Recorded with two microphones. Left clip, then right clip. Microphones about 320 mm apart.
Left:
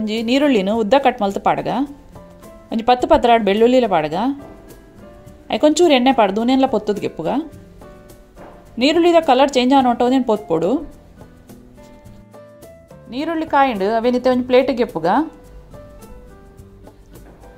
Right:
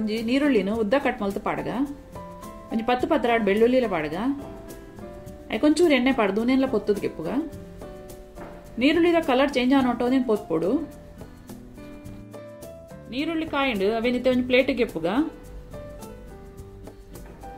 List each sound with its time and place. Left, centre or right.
0.0 s speech: left
5.5 s speech: left
8.7 s speech: left
13.1 s speech: centre